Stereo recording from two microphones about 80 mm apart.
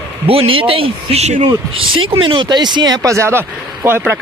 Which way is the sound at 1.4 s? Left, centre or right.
Right.